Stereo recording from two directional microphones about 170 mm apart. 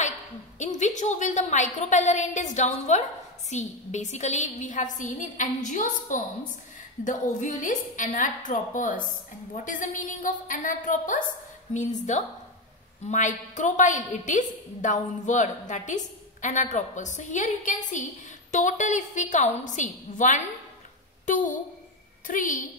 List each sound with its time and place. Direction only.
0.6 s a woman's voice: 45° left (ahead or behind)
22.2 s a woman's voice: 50° left (ahead or behind)